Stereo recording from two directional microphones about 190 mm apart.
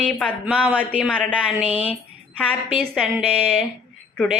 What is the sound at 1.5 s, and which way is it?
A woman's voice, 5° right (ahead or behind).